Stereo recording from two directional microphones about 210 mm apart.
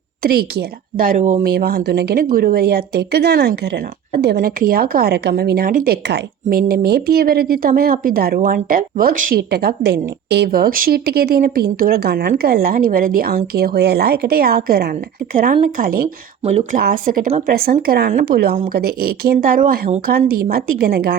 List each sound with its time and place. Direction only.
0.2 s a woman's voice: 45° right (ahead or behind)
1.5 s a woman's voice: 50° right (ahead or behind)
16.5 s speech: 30° right (ahead or behind)
17.5 s a woman's voice: 45° right (ahead or behind)